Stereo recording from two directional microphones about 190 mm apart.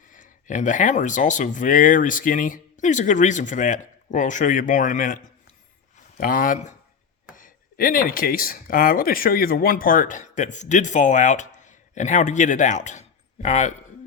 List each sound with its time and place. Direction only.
0.1 s speech: 40° left (ahead or behind)